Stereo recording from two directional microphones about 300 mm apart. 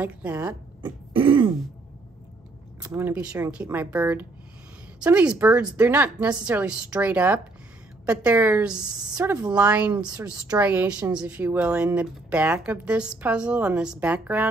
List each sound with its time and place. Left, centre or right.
0.0 s a woman's voice: centre
0.8 s throat clearing: centre
2.8 s a woman's voice: centre